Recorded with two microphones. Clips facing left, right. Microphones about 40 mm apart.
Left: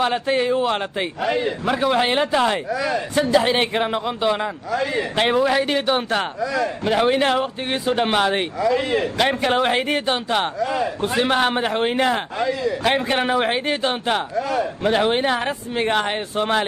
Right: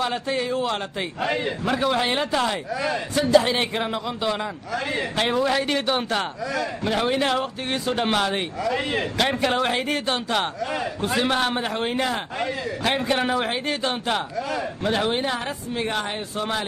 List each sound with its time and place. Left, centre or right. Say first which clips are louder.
0.0 s speech: left 5 dB; left
2.7 s a man's voice: left 3 dB; left
3.2 s speech: left 1 dB; left
5.4 s speech: left 3 dB; centre
6.4 s a man's voice: left 5 dB; left
6.8 s speech: left 5 dB; centre
9.2 s speech: left 1 dB; centre
9.5 s speech: left 4 dB; left
12.4 s a man's voice: left 5 dB; left
12.8 s speech: left 1 dB; left
14.3 s speech: left 5 dB; left
14.8 s speech: left 4 dB; centre
15.0 s speech: left 5 dB; left